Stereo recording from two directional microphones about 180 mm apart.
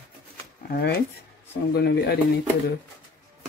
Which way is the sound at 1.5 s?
65° left (ahead or behind).